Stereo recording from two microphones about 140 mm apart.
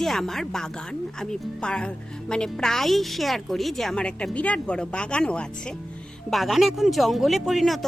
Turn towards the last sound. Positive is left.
turn(degrees=0)  # may be behind; listen again after turning